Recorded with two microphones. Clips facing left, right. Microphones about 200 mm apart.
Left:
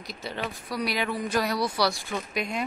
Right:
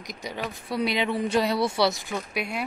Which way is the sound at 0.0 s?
15° right (ahead or behind).